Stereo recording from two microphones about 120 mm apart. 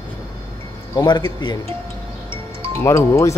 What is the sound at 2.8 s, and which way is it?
Speech, 25° left (ahead or behind).